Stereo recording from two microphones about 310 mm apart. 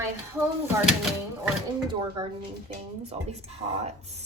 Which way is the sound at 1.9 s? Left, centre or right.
Centre.